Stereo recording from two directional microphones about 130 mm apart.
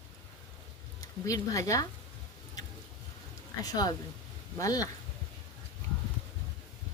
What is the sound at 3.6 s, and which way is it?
Speech, 30° left (ahead or behind).